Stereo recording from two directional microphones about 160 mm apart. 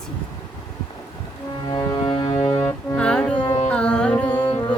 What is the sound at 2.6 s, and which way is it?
Music, 10° left (ahead or behind).